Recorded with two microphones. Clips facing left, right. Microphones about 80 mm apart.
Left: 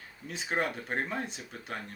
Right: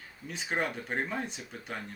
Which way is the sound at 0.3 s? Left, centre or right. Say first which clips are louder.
Left 1 dB; centre.